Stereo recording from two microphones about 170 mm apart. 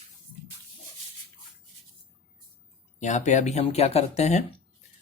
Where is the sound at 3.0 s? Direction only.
45° left (ahead or behind).